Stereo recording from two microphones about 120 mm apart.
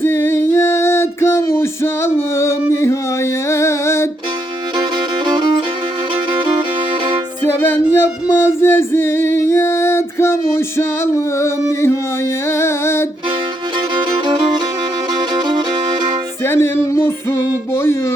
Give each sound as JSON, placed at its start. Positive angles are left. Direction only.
{"t": 0.0, "sound": "music", "side_deg": 20}
{"t": 4.8, "sound": "music", "side_deg": -40}
{"t": 7.4, "sound": "music", "side_deg": 20}
{"t": 13.9, "sound": "music", "side_deg": -40}
{"t": 16.4, "sound": "music", "side_deg": 20}